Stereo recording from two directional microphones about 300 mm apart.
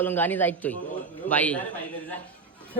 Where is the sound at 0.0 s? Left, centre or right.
Centre.